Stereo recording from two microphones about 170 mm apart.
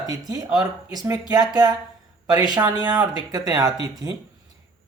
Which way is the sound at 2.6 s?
25° right (ahead or behind).